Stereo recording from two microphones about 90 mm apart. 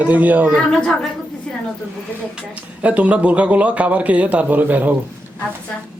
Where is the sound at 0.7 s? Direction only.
10° left (ahead or behind).